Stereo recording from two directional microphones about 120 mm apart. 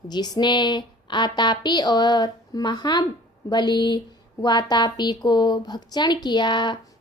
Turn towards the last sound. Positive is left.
turn(degrees=40)  # may be behind; listen again after turning